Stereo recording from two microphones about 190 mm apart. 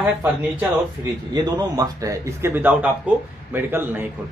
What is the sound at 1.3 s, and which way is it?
Speech, 20° right (ahead or behind).